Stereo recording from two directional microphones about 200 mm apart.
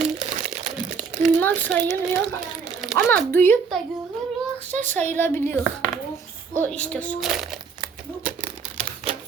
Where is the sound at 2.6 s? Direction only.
Centre (ahead or behind).